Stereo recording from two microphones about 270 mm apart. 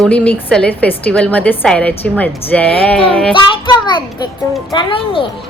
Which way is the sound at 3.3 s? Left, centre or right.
Centre.